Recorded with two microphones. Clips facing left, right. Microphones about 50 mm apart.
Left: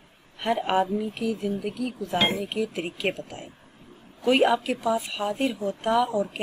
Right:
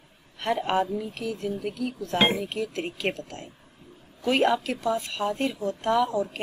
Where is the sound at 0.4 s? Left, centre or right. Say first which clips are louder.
Left 1 dB; centre.